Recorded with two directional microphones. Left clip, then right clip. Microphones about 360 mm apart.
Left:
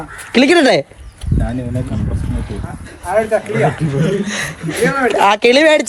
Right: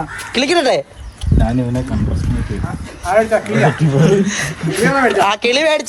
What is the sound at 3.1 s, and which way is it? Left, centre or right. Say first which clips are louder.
Speech: right 1 dB; right.